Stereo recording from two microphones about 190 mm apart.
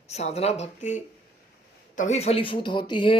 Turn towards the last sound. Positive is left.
turn(degrees=25)  # may be behind; listen again after turning